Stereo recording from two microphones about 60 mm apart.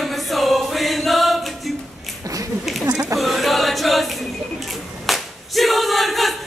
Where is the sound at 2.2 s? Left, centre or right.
Right.